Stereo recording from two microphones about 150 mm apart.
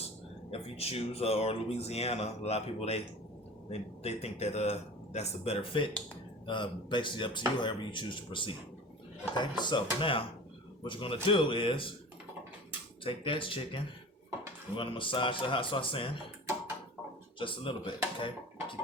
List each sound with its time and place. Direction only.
0.5 s speech: 40° left (ahead or behind)
13.1 s speech: 35° left (ahead or behind)
17.4 s speech: 35° left (ahead or behind)